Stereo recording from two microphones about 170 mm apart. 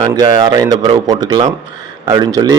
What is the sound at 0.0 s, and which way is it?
Speech, 25° right (ahead or behind).